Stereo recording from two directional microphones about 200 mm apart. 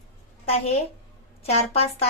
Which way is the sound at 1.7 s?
30° left (ahead or behind).